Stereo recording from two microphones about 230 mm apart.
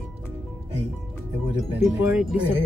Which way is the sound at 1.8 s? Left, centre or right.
Centre.